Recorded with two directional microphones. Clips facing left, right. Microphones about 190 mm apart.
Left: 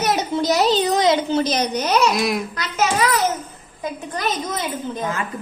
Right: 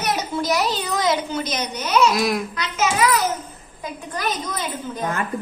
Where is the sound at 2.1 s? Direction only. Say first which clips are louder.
Even; centre (ahead or behind).